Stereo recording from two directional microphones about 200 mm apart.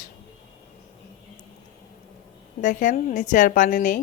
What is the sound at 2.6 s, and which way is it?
A woman's voice, 40° left (ahead or behind).